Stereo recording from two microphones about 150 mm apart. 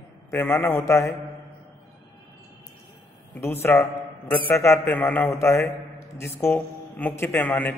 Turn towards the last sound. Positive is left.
turn(degrees=10)  # may be behind; listen again after turning